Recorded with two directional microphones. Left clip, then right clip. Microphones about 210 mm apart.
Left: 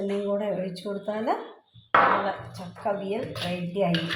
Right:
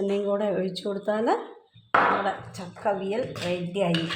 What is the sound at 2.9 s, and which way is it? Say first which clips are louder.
Speech: right 2 dB; 45° right (ahead or behind).